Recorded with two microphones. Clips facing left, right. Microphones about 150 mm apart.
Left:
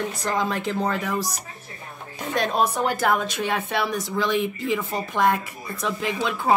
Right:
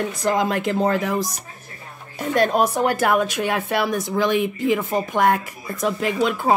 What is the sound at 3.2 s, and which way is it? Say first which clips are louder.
Speech: right 4 dB; 45° right (ahead or behind).